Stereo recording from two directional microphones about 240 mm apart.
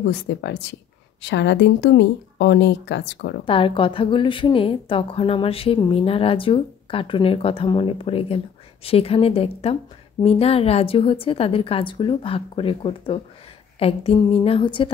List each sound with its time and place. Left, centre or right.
0.1 s speech: left
3.4 s a woman's voice: left